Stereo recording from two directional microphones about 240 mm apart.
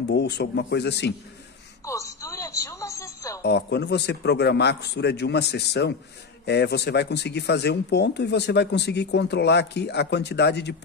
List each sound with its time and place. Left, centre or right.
0.1 s speech: left
1.9 s music: centre
3.4 s speech: left